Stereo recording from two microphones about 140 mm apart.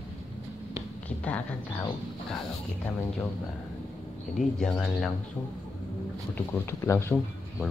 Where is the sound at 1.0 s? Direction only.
10° left (ahead or behind).